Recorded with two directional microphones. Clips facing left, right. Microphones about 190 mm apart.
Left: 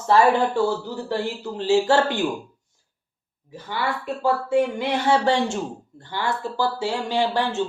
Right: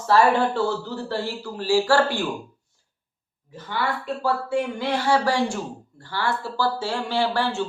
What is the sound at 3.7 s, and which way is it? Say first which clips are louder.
Speech: even; 15° left (ahead or behind).